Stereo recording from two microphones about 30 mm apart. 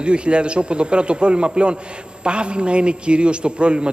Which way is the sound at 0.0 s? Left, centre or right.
Right.